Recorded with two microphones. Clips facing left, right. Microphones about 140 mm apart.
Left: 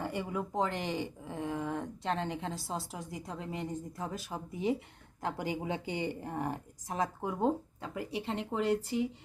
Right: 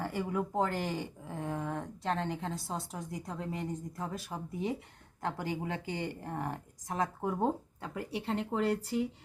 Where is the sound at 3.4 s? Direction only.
25° left (ahead or behind).